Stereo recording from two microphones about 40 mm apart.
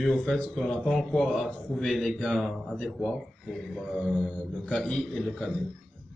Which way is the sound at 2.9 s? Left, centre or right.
Centre.